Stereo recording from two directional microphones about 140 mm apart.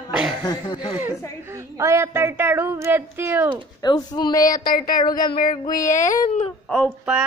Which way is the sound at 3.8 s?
30° left (ahead or behind).